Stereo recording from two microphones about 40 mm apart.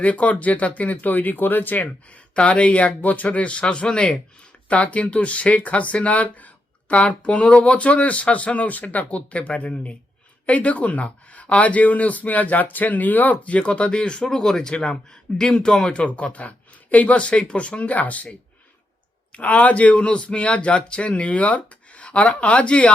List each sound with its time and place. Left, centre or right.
0.0 s speech: left
2.3 s speech: left
14.3 s speech: centre; by 18.3 s left
19.3 s speech: left